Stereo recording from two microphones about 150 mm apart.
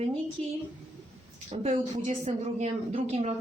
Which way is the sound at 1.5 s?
45° right (ahead or behind).